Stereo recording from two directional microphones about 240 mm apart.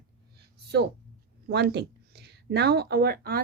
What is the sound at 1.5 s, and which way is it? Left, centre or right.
Speech, right.